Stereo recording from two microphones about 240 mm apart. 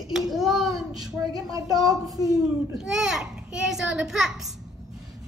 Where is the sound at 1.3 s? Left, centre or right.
Centre.